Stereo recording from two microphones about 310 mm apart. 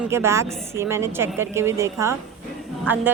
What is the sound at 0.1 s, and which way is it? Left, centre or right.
Speech, centre.